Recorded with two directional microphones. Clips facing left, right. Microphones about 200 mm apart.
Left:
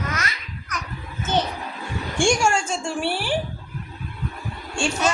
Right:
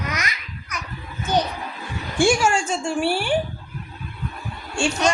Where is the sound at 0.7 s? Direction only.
10° right (ahead or behind).